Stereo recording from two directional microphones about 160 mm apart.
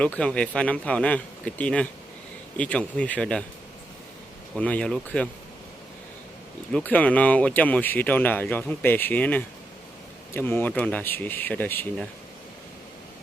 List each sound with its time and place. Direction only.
0.0 s speech: 5° left (ahead or behind)
4.5 s speech: 5° left (ahead or behind)
6.7 s speech: 5° left (ahead or behind)